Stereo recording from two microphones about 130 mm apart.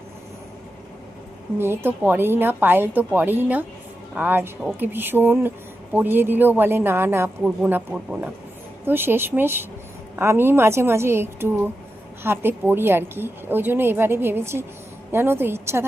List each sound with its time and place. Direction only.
1.5 s speech: 15° right (ahead or behind)